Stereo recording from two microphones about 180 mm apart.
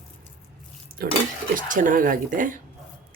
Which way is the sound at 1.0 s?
55° right (ahead or behind).